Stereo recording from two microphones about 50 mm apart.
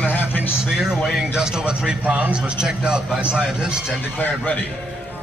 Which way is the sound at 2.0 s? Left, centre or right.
Right.